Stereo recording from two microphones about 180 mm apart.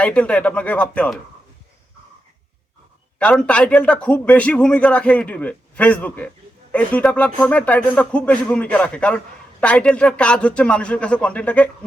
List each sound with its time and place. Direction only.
0.0 s a man's voice: 5° left (ahead or behind)
3.2 s a man's voice: 5° left (ahead or behind)